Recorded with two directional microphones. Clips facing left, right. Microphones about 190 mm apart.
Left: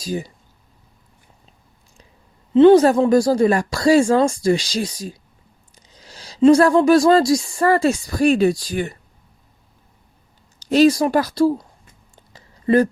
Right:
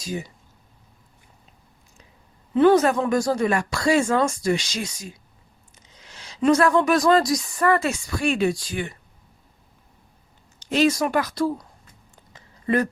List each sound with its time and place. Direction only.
0.0 s speech: 35° left (ahead or behind)
2.5 s speech: 25° left (ahead or behind)
10.6 s speech: 35° left (ahead or behind)
12.1 s a sound: 30° left (ahead or behind)